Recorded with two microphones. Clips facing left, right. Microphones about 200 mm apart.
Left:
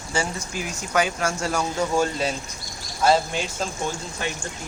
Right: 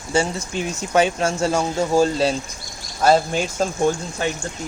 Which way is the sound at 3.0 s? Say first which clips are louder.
Right 4 dB; 45° right (ahead or behind).